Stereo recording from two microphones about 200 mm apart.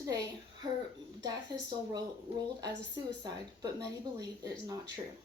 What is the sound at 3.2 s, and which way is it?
Speech, 20° right (ahead or behind).